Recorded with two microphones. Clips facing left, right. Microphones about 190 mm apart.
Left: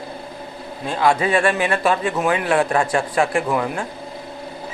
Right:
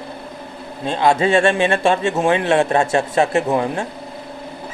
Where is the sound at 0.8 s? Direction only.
25° right (ahead or behind).